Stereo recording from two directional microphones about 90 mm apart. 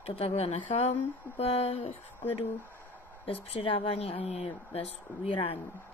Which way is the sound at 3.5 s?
90° left.